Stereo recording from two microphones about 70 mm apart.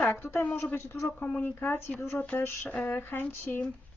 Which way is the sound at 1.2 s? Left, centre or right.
Left.